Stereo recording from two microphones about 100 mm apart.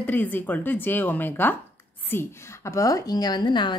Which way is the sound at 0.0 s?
15° left (ahead or behind).